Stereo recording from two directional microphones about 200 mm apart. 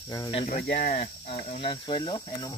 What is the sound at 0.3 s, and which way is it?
Speech, 30° left (ahead or behind).